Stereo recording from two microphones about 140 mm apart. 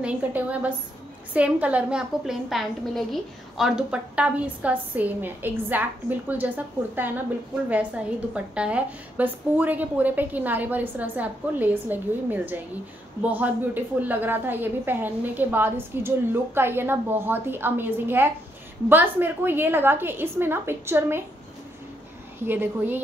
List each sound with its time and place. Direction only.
0.0 s a woman's voice: 10° right (ahead or behind)
8.5 s a woman's voice: 10° right (ahead or behind)
22.4 s a woman's voice: 15° right (ahead or behind)